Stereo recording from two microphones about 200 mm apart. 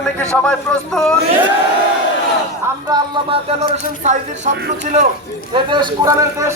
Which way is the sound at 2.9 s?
25° right (ahead or behind).